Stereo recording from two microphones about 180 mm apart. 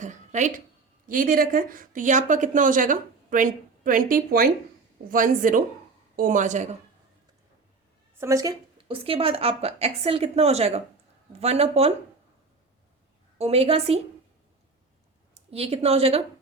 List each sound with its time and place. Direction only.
0.0 s a sound: 40° right (ahead or behind)
1.0 s speech: 50° right (ahead or behind)
8.2 s a woman's voice: 15° right (ahead or behind)
8.9 s a woman's voice: 30° right (ahead or behind)
13.4 s a woman's voice: 35° right (ahead or behind)
15.4 s a woman's voice: 35° right (ahead or behind)